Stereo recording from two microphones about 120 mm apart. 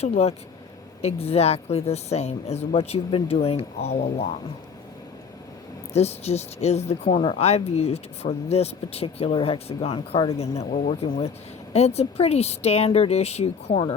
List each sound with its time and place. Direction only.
0.0 s speech: 60° left (ahead or behind)
5.9 s speech: 60° left (ahead or behind)
7.2 s speech: 55° left (ahead or behind)
10.3 s speech: 60° left (ahead or behind)